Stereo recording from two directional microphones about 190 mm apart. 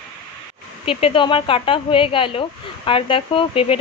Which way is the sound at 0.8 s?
30° left (ahead or behind).